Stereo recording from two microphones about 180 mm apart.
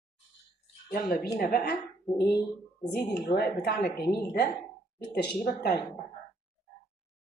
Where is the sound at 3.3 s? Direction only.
65° left (ahead or behind).